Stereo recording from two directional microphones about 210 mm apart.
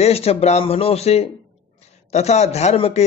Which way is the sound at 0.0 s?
30° left (ahead or behind).